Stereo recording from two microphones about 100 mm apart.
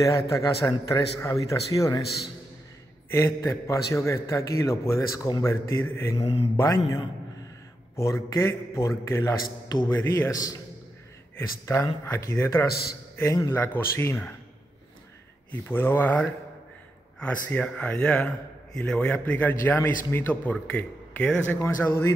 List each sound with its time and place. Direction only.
0.0 s speech: 35° left (ahead or behind)
3.4 s a man's voice: 30° left (ahead or behind)
6.1 s speech: 65° left (ahead or behind)
6.5 s speech: 35° left (ahead or behind)
8.0 s a man's voice: 30° left (ahead or behind)
15.6 s a man's voice: 20° left (ahead or behind)